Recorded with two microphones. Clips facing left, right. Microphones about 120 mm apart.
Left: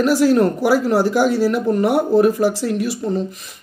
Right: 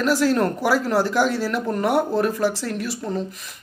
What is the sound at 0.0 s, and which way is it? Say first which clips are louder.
Speech: left 5 dB; 10° left (ahead or behind).